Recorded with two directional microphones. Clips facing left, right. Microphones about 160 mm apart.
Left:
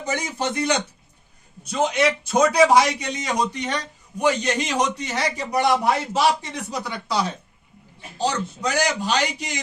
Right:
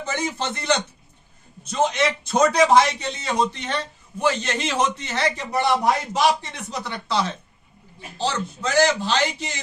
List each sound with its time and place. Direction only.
0.0 s a man's voice: 15° left (ahead or behind)